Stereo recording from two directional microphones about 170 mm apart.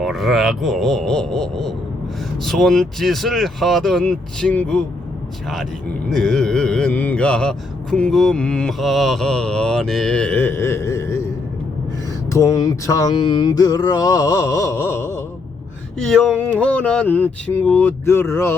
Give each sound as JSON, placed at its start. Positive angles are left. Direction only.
{"t": 0.0, "sound": "mantra", "side_deg": 0}
{"t": 6.1, "sound": "mantra", "side_deg": 5}
{"t": 12.3, "sound": "mantra", "side_deg": 20}
{"t": 16.0, "sound": "mantra", "side_deg": 0}
{"t": 16.4, "sound": "speech", "side_deg": 10}